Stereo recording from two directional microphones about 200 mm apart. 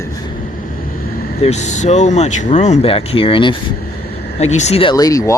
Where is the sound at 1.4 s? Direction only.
35° left (ahead or behind).